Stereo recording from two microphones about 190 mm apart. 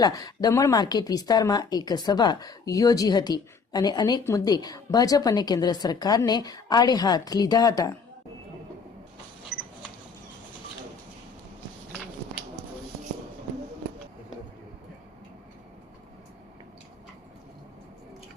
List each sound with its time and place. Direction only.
0.0 s a woman's voice: 20° left (ahead or behind)